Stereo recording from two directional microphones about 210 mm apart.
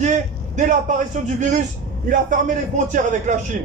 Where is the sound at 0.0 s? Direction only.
35° right (ahead or behind).